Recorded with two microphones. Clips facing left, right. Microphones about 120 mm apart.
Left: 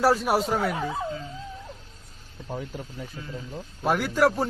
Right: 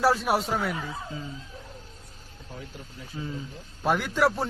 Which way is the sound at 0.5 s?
45° left (ahead or behind).